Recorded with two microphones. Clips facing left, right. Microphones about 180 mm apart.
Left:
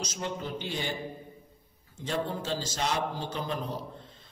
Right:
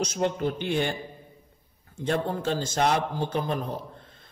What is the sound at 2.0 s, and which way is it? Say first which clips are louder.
A man's voice: right 5 dB; 55° right (ahead or behind).